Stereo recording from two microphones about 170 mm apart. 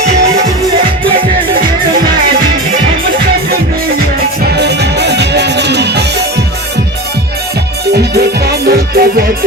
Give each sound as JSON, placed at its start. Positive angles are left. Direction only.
{"t": 0.1, "sound": "music", "side_deg": -45}
{"t": 4.5, "sound": "music", "side_deg": -80}
{"t": 7.9, "sound": "music", "side_deg": -70}